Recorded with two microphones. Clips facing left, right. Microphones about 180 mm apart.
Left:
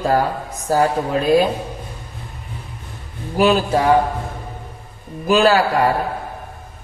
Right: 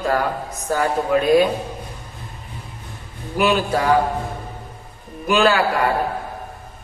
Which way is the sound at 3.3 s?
35° left (ahead or behind).